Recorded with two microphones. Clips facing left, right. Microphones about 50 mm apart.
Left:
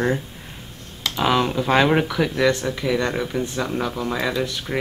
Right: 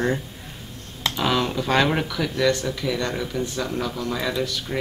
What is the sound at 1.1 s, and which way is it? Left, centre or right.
Speech, centre.